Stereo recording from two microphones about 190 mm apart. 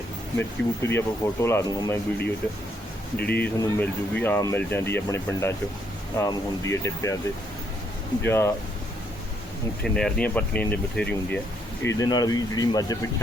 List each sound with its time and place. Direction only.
0.3 s speech: 15° left (ahead or behind)
3.2 s speech: 55° left (ahead or behind)
3.4 s speech: 10° left (ahead or behind)
8.2 s speech: 10° left (ahead or behind)
9.8 s speech: 5° left (ahead or behind); by 13.2 s 20° left (ahead or behind)